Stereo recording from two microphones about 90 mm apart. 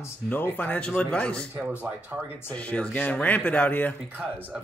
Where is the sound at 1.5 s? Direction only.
20° right (ahead or behind).